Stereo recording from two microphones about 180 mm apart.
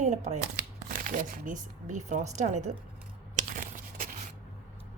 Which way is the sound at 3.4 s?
50° right (ahead or behind).